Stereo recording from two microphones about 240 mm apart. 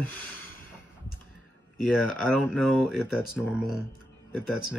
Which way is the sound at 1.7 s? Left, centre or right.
Centre.